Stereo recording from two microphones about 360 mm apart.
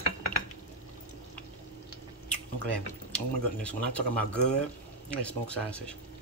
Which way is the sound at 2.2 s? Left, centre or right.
Centre.